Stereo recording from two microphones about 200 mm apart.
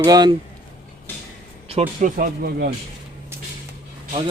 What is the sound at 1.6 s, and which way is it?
Speech, 35° right (ahead or behind).